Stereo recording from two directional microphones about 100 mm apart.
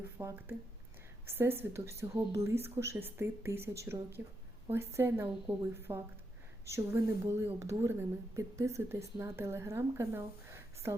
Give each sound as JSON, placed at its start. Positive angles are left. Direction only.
{"t": 0.2, "sound": "speech", "side_deg": -35}
{"t": 1.3, "sound": "a woman's voice", "side_deg": -20}